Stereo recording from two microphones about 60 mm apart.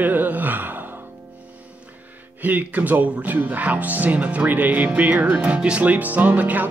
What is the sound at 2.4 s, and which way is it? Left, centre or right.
Speech, right.